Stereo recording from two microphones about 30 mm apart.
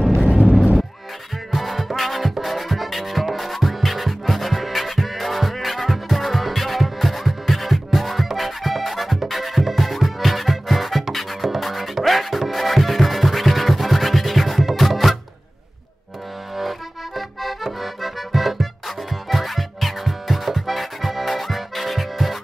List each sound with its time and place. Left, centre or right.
0.2 s vehicle: right
1.5 s music: centre
16.5 s accordion: centre